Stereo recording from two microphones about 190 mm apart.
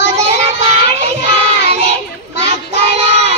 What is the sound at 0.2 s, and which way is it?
Child singing, 35° right (ahead or behind).